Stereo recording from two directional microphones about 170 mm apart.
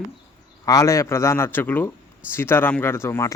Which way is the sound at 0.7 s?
20° left (ahead or behind).